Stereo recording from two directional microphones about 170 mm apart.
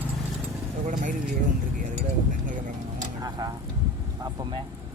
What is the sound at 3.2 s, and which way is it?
Vehicle, 25° right (ahead or behind).